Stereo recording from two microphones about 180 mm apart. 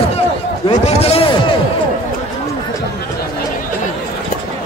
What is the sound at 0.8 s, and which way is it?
Chop, 35° left (ahead or behind).